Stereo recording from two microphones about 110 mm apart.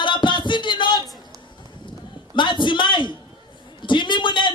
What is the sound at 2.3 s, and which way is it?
A man's voice, 45° left (ahead or behind).